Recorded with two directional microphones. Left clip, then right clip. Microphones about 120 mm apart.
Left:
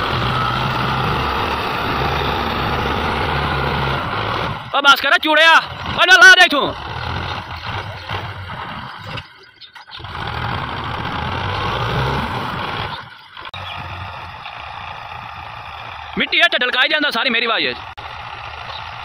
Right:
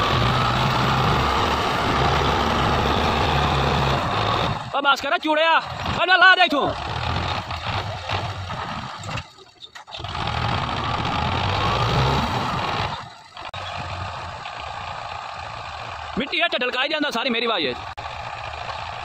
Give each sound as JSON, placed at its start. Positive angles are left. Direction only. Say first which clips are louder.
{"t": 0.0, "sound": "vehicle", "louder": "left 1 dB", "side_deg": -25}
{"t": 3.0, "sound": "vehicle", "louder": "left 1 dB", "side_deg": -35}
{"t": 4.1, "sound": "a sound", "louder": "left 1 dB", "side_deg": -30}
{"t": 4.7, "sound": "speech", "louder": "left 8 dB", "side_deg": 0}
{"t": 7.1, "sound": "vehicle", "louder": "even", "side_deg": -30}
{"t": 10.1, "sound": "vehicle", "louder": "left 1 dB", "side_deg": -35}
{"t": 16.2, "sound": "a sound", "louder": "left 8 dB", "side_deg": 5}